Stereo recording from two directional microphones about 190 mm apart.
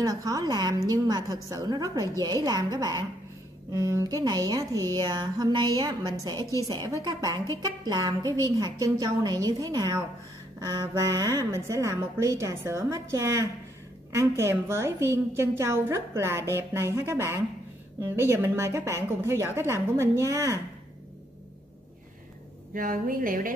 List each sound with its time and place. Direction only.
0.0 s a woman's voice: 20° right (ahead or behind)
22.8 s a woman's voice: 45° right (ahead or behind)